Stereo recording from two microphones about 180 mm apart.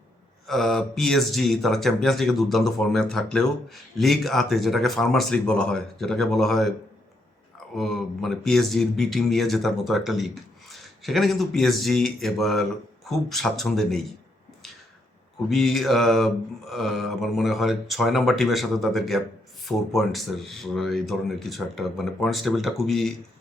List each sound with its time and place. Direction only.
0.4 s speech: centre (ahead or behind)
7.8 s speech: centre (ahead or behind)
15.4 s speech: centre (ahead or behind)